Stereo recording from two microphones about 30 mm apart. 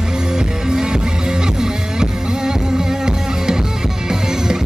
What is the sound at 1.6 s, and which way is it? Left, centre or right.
Music, right.